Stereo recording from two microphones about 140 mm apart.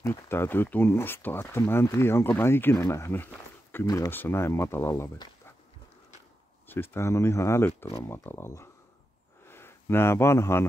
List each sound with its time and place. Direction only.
0.0 s speech: 15° left (ahead or behind)
6.7 s speech: 15° left (ahead or behind)